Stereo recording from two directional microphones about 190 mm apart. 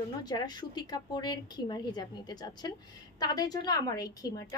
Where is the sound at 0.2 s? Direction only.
20° left (ahead or behind).